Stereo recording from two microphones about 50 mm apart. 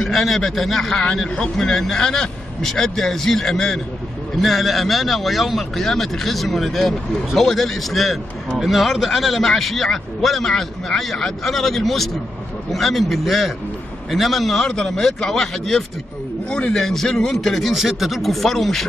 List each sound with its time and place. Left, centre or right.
0.0 s a man's voice: centre
1.0 s a man's voice: centre
16.4 s a man's voice: centre
16.7 s a man's voice: centre